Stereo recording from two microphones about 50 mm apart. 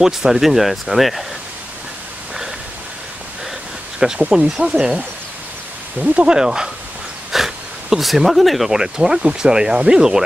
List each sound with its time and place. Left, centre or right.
0.0 s speech: centre
4.3 s speech: centre
6.3 s speech: centre